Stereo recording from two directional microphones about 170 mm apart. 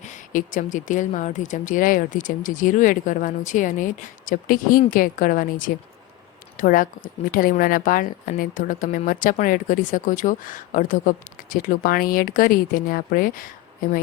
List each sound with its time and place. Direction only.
0.0 s a woman's voice: 50° left (ahead or behind)